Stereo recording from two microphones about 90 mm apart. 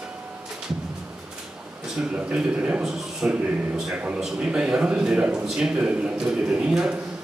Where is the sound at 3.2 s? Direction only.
15° right (ahead or behind).